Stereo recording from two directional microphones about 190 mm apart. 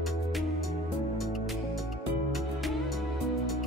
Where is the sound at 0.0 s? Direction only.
Centre (ahead or behind).